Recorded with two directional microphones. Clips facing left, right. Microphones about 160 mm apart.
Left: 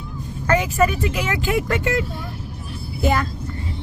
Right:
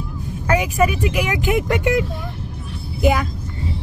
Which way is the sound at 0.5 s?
10° right (ahead or behind).